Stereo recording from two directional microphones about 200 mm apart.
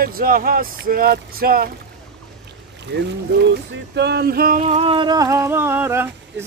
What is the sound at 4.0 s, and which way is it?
Speech, 55° right (ahead or behind).